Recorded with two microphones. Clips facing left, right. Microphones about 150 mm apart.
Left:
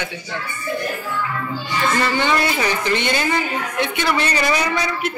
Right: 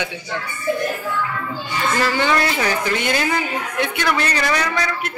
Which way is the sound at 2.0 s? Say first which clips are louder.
Right 3 dB; centre (ahead or behind).